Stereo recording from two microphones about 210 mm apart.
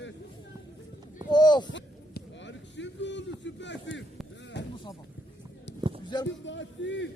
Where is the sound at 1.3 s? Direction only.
20° left (ahead or behind).